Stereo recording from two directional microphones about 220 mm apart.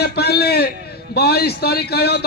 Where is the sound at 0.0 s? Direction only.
45° left (ahead or behind).